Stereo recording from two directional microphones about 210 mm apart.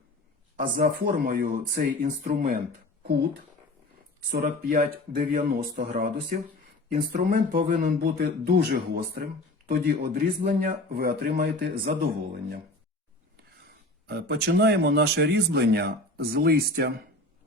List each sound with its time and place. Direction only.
0.5 s speech: 40° right (ahead or behind)
4.3 s speech: 45° right (ahead or behind)
14.1 s speech: 50° right (ahead or behind)